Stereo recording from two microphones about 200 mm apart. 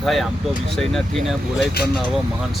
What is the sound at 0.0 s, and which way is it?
Speech, centre (ahead or behind).